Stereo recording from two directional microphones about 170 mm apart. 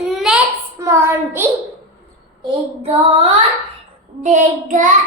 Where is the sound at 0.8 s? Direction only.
15° right (ahead or behind).